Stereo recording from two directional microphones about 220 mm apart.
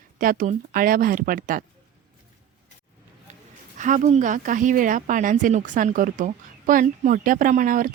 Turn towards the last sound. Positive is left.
turn(degrees=-40)  # may be behind; listen again after turning